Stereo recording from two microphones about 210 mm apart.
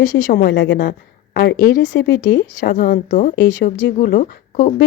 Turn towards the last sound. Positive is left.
turn(degrees=40)  # may be behind; listen again after turning